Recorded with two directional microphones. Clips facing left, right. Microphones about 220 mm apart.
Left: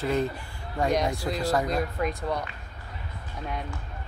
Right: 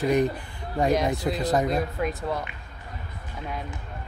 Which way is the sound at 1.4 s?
20° right (ahead or behind).